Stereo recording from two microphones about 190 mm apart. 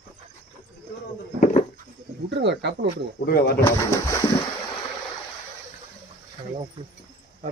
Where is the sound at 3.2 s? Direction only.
55° left (ahead or behind).